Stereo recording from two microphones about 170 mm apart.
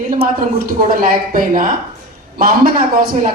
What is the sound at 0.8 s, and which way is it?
A man's voice, 55° right (ahead or behind).